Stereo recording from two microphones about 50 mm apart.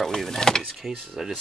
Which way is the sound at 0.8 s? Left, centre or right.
Centre.